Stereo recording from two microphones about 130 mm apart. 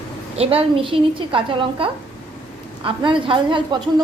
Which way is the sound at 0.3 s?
45° right (ahead or behind).